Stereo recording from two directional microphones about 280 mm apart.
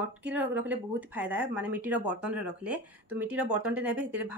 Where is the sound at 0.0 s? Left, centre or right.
Centre.